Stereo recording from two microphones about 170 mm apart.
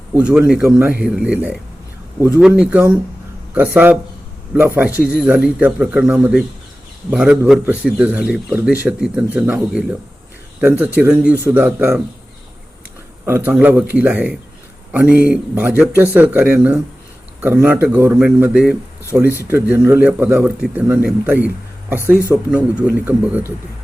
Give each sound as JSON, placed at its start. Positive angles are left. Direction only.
{"t": 0.1, "sound": "speech", "side_deg": -5}
{"t": 13.2, "sound": "speech", "side_deg": -10}
{"t": 22.1, "sound": "speech", "side_deg": 15}
{"t": 22.5, "sound": "speech", "side_deg": -5}